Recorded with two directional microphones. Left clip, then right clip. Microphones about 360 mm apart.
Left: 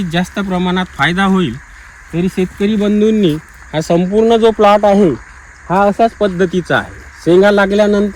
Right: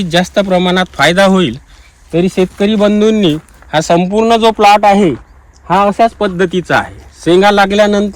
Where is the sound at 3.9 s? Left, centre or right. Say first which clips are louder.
Even; right.